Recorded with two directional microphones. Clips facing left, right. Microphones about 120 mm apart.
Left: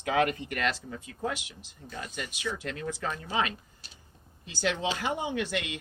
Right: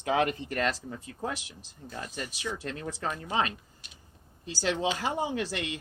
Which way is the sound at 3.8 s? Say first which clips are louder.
Left 1 dB; 35° left (ahead or behind).